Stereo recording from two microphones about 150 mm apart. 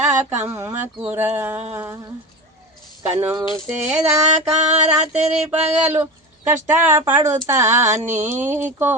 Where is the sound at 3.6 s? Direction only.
10° right (ahead or behind).